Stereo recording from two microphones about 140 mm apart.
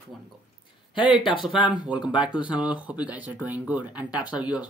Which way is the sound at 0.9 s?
35° left (ahead or behind).